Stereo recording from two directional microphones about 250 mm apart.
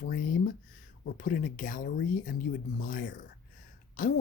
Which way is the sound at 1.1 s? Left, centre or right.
Left.